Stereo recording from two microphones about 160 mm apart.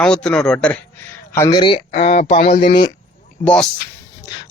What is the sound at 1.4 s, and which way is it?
Speech, 30° left (ahead or behind).